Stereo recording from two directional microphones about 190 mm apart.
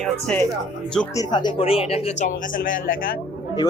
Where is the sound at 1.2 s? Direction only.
25° left (ahead or behind); by 3.2 s 50° left (ahead or behind).